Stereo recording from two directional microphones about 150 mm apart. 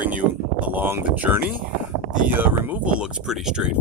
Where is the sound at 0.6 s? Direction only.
10° right (ahead or behind).